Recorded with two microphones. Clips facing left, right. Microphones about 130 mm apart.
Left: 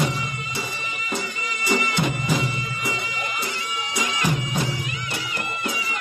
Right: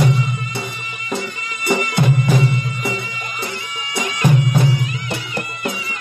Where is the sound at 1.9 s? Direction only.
60° right (ahead or behind).